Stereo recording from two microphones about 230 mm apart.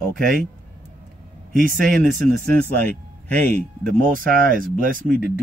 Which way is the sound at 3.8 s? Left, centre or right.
Right.